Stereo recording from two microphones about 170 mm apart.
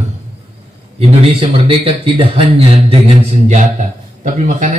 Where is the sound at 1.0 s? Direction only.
35° right (ahead or behind).